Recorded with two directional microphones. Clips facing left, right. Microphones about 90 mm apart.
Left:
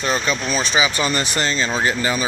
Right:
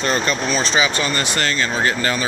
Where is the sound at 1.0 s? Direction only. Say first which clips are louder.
Even; 20° left (ahead or behind).